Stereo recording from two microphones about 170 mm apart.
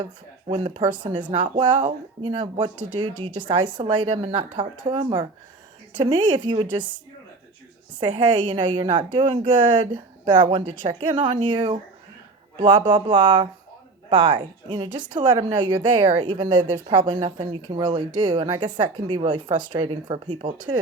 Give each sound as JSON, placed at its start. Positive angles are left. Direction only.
{"t": 0.0, "sound": "speech", "side_deg": -30}
{"t": 8.2, "sound": "speech", "side_deg": -25}